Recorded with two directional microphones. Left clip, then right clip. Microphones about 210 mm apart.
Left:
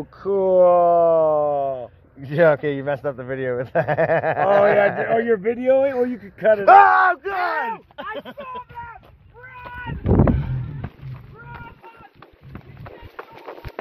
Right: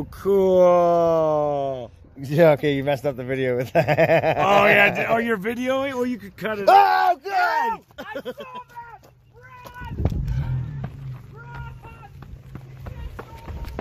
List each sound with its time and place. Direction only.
0.2 s speech: 55° right (ahead or behind)
2.2 s a man's voice: 30° right (ahead or behind)
6.7 s speech: 10° right (ahead or behind)
8.2 s speech: 10° left (ahead or behind)
10.3 s a sound: centre (ahead or behind)